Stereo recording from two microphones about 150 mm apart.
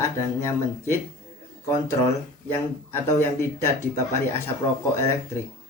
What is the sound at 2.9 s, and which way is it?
Speech, 15° left (ahead or behind).